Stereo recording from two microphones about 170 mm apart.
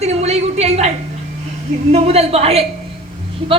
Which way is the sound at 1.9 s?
40° right (ahead or behind).